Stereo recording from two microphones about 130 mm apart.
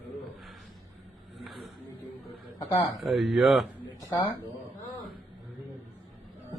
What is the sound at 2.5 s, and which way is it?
Speech, 30° left (ahead or behind).